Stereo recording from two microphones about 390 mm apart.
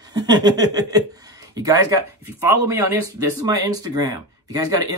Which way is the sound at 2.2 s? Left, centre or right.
Centre.